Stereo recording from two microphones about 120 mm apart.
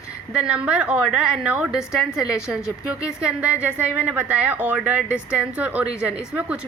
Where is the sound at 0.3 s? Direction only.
10° right (ahead or behind).